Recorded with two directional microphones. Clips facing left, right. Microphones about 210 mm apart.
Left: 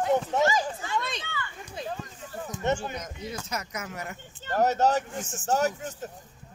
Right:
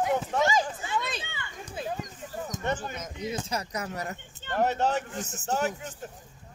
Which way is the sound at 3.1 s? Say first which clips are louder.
Right 3 dB; 20° right (ahead or behind).